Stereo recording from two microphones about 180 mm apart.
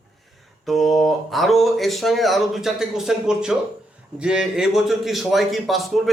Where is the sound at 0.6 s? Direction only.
Centre (ahead or behind).